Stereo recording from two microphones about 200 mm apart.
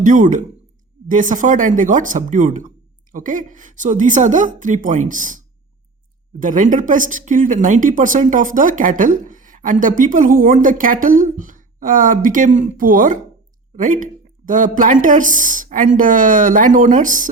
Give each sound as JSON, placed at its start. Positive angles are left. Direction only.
{"t": 0.0, "sound": "speech", "side_deg": -40}
{"t": 6.4, "sound": "speech", "side_deg": -40}